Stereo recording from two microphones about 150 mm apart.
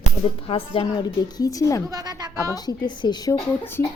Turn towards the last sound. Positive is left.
turn(degrees=15)  # may be behind; listen again after turning